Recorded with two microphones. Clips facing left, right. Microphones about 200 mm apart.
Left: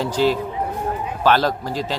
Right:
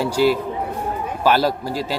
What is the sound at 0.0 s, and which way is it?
Speech, 10° right (ahead or behind).